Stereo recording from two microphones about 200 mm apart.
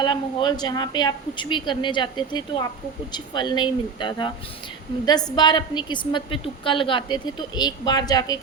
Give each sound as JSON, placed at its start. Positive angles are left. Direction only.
{"t": 0.0, "sound": "a woman's voice", "side_deg": 25}